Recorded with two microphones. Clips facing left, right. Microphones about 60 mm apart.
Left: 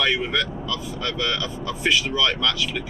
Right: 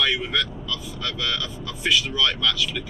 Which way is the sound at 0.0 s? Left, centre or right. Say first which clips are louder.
Left 2 dB; centre.